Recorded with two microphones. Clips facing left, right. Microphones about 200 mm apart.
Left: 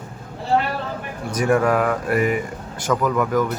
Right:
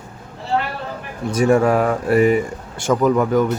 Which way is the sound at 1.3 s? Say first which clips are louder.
Right 3 dB; 25° right (ahead or behind).